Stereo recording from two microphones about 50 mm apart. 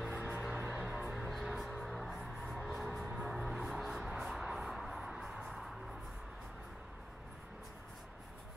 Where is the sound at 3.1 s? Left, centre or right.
Centre.